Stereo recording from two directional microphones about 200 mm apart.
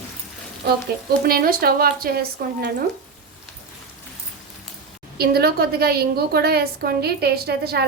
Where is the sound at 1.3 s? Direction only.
45° right (ahead or behind).